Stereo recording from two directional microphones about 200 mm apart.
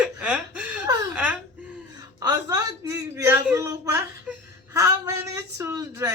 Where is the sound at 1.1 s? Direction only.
5° right (ahead or behind).